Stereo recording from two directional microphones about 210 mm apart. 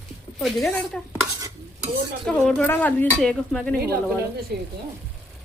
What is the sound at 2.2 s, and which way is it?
Speech, centre (ahead or behind).